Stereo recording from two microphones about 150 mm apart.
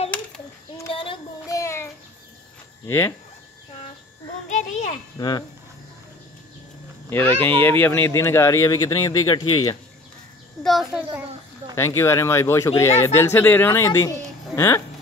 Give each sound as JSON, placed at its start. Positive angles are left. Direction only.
{"t": 0.8, "sound": "child singing", "side_deg": 35}
{"t": 1.5, "sound": "child singing", "side_deg": 20}
{"t": 2.9, "sound": "speech", "side_deg": 15}
{"t": 4.5, "sound": "children playing", "side_deg": 55}
{"t": 5.1, "sound": "speech", "side_deg": 30}
{"t": 7.1, "sound": "speech", "side_deg": 15}
{"t": 10.6, "sound": "a child's voice", "side_deg": 0}
{"t": 11.7, "sound": "speech", "side_deg": 20}